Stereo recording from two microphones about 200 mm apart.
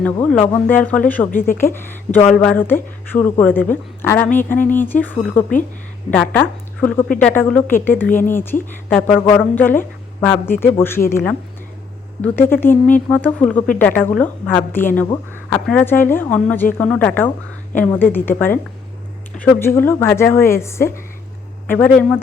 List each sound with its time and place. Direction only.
0.0 s a woman's voice: 5° left (ahead or behind)
1.3 s speech: 45° left (ahead or behind)
1.7 s a woman's voice: 10° left (ahead or behind)